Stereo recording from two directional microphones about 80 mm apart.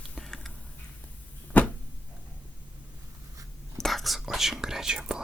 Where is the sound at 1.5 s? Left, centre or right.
Left.